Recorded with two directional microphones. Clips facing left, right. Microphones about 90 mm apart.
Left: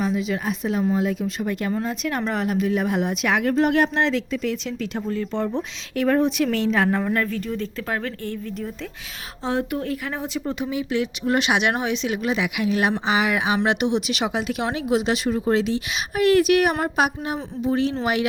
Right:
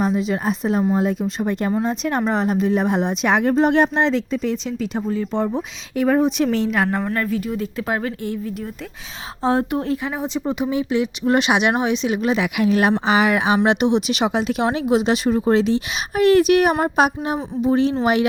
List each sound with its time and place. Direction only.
0.0 s speech: 35° right (ahead or behind)
5.0 s speech: 10° right (ahead or behind)
6.7 s a woman's voice: 5° right (ahead or behind)
9.4 s speech: 40° right (ahead or behind)
13.7 s speech: 25° right (ahead or behind)